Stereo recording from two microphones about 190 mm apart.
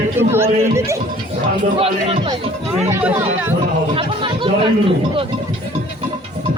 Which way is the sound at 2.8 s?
15° right (ahead or behind).